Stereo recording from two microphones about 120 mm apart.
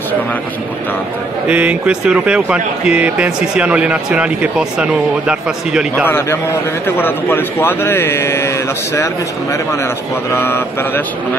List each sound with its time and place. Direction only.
1.5 s speech: 10° right (ahead or behind)
6.0 s a man's voice: 20° left (ahead or behind)